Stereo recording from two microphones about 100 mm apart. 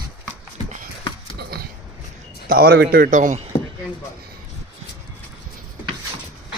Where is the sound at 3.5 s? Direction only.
75° left (ahead or behind).